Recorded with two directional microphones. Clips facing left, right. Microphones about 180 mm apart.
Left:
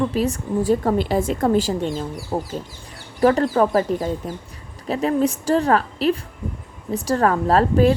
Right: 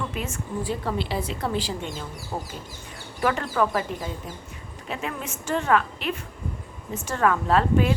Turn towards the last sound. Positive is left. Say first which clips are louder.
# left 5 dB
turn(degrees=40)  # may be behind; listen again after turning